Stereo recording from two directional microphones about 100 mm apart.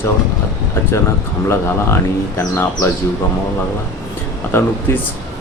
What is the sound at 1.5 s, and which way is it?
Speech, 25° left (ahead or behind).